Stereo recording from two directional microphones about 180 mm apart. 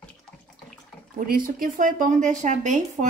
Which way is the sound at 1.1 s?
50° right (ahead or behind).